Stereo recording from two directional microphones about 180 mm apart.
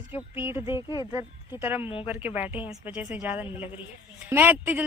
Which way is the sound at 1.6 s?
10° right (ahead or behind).